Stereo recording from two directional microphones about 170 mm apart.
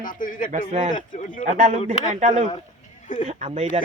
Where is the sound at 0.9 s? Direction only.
50° left (ahead or behind).